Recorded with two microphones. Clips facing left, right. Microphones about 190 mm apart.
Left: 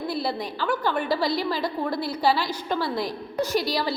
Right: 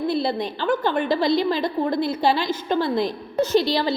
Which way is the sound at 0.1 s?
25° right (ahead or behind).